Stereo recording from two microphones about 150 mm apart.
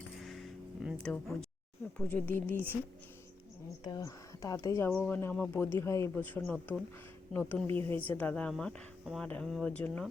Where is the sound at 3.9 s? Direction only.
25° left (ahead or behind).